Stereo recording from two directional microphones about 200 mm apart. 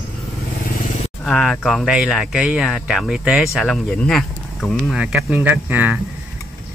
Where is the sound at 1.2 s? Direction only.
Centre (ahead or behind).